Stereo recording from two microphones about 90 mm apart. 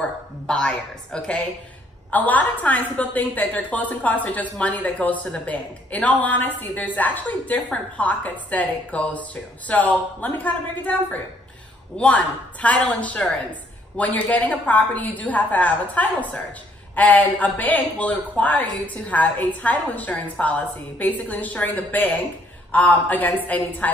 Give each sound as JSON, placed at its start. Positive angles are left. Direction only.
{"t": 0.5, "sound": "a woman's voice", "side_deg": 10}